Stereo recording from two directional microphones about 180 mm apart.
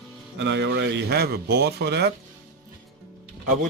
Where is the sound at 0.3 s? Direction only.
80° right.